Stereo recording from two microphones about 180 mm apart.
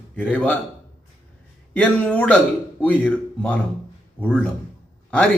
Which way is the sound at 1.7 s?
10° left (ahead or behind).